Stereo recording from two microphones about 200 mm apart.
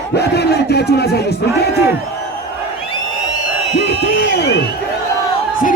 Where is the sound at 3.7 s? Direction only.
55° left (ahead or behind).